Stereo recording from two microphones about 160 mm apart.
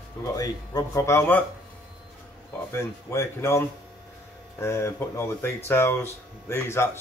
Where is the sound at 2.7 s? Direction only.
15° left (ahead or behind).